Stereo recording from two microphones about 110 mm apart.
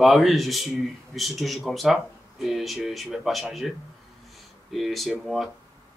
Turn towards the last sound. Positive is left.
turn(degrees=0)  # may be behind; listen again after turning